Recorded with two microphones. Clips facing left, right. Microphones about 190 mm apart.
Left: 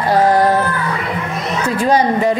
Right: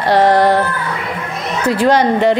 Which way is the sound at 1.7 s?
75° right (ahead or behind).